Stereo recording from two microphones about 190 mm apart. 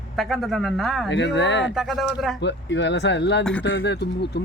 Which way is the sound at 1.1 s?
70° left (ahead or behind).